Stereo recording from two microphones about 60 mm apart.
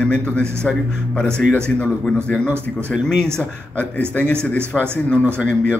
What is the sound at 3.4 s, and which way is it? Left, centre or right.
Speech, left.